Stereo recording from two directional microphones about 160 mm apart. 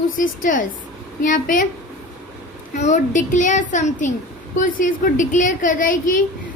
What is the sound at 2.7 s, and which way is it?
A child's voice, 45° left (ahead or behind).